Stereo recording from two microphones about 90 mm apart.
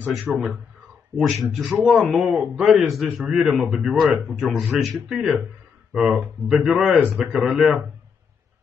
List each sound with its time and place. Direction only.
0.3 s speech: centre (ahead or behind)
7.0 s speech: 20° right (ahead or behind)
7.3 s speech: 5° right (ahead or behind)